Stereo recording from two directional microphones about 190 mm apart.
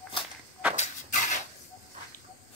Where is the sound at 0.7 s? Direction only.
40° left (ahead or behind).